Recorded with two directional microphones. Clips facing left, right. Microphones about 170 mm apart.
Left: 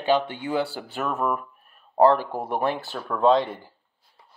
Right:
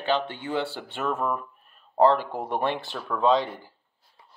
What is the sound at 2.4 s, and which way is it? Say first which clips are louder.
Speech: left 2 dB; 5° left (ahead or behind).